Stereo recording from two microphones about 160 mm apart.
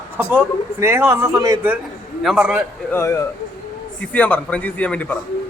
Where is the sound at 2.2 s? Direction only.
5° right (ahead or behind).